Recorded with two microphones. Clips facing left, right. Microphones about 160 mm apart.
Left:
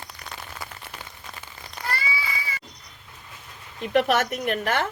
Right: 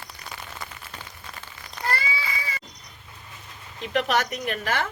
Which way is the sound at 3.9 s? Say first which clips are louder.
Left 3 dB; 55° left (ahead or behind).